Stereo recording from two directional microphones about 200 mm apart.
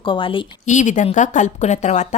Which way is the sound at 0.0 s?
25° left (ahead or behind).